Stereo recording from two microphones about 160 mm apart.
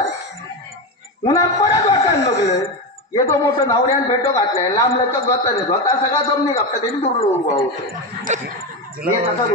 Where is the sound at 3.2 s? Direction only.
20° left (ahead or behind).